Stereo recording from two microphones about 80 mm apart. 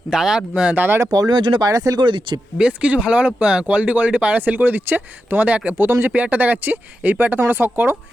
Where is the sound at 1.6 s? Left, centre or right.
Right.